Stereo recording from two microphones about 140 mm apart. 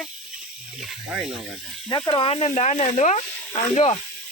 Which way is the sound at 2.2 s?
45° left (ahead or behind).